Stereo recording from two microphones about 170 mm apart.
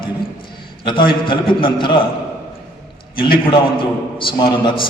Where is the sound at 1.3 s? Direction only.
30° left (ahead or behind).